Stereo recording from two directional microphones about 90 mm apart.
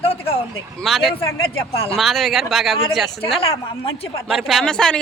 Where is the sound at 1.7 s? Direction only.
90° left.